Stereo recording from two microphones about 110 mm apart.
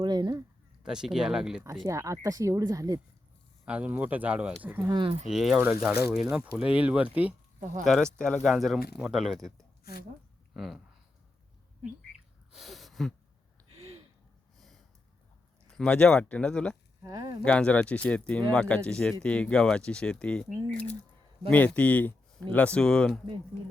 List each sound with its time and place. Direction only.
0.0 s speech: 40° right (ahead or behind)
0.8 s speech: 5° right (ahead or behind)
1.6 s speech: 30° right (ahead or behind)
3.7 s speech: 10° right (ahead or behind)
4.9 s speech: 50° right (ahead or behind)
5.3 s speech: 5° right (ahead or behind)
5.5 s speech: 15° right (ahead or behind)
7.9 s speech: 5° left (ahead or behind)
10.5 s speech: centre (ahead or behind)
12.5 s a sound: centre (ahead or behind)
15.6 s speech: 5° left (ahead or behind)
17.0 s speech: 35° right (ahead or behind)
17.4 s speech: 10° left (ahead or behind)
21.5 s speech: 10° left (ahead or behind)